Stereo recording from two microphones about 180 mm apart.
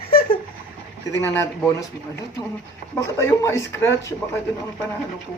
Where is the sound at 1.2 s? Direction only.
15° left (ahead or behind).